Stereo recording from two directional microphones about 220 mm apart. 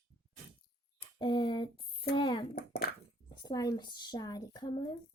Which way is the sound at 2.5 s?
45° left (ahead or behind).